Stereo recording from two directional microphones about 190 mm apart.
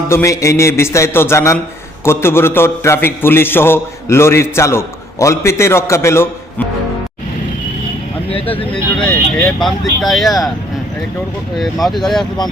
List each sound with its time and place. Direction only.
0.1 s a man's voice: 15° left (ahead or behind)
8.3 s speech: 30° left (ahead or behind)
9.0 s speech: 5° left (ahead or behind)
11.5 s speech: centre (ahead or behind)